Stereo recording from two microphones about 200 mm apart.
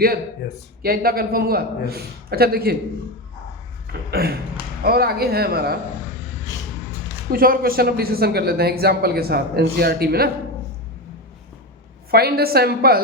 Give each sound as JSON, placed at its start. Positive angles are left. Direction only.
{"t": 0.8, "sound": "speech", "side_deg": -50}
{"t": 4.1, "sound": "speech", "side_deg": -50}
{"t": 7.3, "sound": "speech", "side_deg": -45}
{"t": 12.1, "sound": "speech", "side_deg": -50}